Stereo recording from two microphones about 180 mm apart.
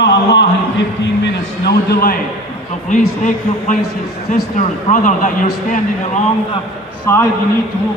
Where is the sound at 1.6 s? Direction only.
55° left (ahead or behind).